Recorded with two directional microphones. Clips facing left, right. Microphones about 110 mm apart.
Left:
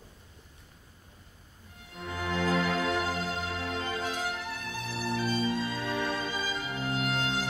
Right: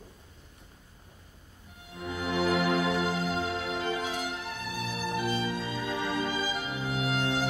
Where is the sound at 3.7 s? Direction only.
15° right (ahead or behind).